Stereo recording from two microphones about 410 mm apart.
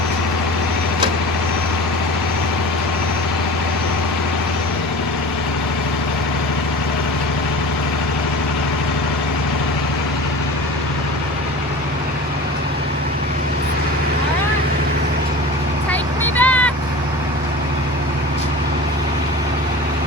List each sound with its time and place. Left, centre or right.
15.9 s vehicle: centre